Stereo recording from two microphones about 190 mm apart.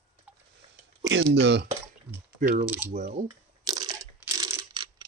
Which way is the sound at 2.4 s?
45° right (ahead or behind).